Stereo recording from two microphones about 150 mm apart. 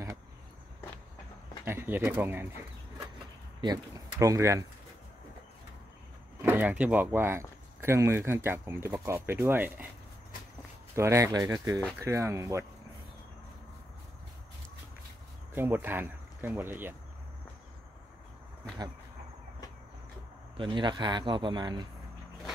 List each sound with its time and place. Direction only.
1.6 s speech: 15° right (ahead or behind)
3.6 s speech: 25° right (ahead or behind)
6.4 s speech: 10° right (ahead or behind)
11.0 s speech: 20° right (ahead or behind)
15.5 s speech: 15° right (ahead or behind)
20.5 s speech: 30° right (ahead or behind)